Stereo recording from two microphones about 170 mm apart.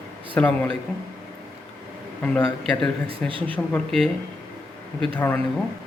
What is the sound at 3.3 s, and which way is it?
Speech, 30° right (ahead or behind).